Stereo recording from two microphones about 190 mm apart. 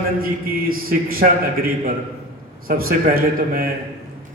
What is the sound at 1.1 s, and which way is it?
A man's voice, 50° right (ahead or behind).